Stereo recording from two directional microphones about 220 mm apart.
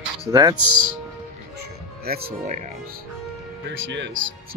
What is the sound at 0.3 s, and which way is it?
Speech, 15° right (ahead or behind).